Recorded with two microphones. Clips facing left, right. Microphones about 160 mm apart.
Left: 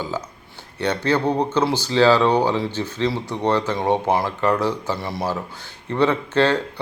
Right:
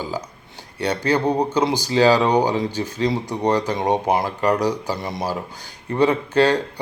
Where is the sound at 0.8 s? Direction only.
10° right (ahead or behind).